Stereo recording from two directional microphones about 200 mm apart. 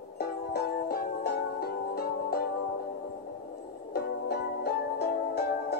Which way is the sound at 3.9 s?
50° left (ahead or behind).